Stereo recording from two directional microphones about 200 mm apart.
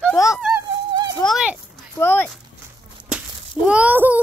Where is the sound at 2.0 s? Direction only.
10° left (ahead or behind).